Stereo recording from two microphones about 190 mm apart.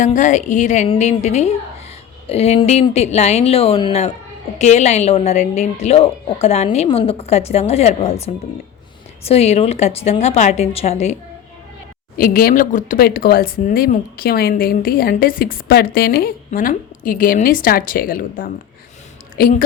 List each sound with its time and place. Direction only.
0.0 s a woman's voice: 40° left (ahead or behind)
12.1 s speech: 50° left (ahead or behind)